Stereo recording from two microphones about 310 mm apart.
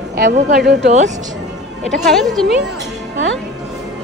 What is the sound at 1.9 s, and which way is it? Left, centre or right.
Speech, centre.